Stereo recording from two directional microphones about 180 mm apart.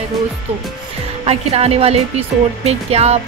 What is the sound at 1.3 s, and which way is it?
Speech, 35° right (ahead or behind).